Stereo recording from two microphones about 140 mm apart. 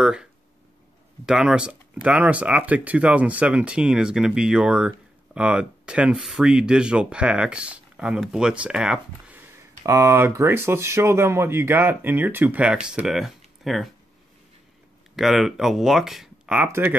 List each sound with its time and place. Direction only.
0.0 s speech: 5° right (ahead or behind)
15.1 s speech: centre (ahead or behind)
16.6 s speech: 15° right (ahead or behind)